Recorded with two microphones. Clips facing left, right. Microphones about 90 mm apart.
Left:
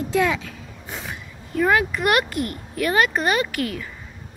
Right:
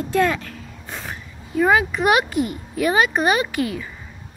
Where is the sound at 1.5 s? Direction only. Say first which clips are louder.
Right 2 dB; 10° right (ahead or behind).